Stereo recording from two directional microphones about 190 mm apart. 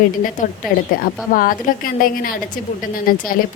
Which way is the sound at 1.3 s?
45° left (ahead or behind).